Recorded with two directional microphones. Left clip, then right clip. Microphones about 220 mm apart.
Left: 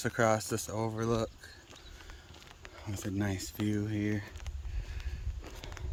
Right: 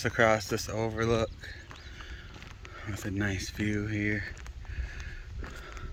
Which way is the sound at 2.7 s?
5° right (ahead or behind).